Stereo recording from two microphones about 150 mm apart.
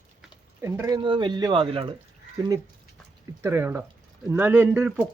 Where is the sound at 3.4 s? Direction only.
15° right (ahead or behind).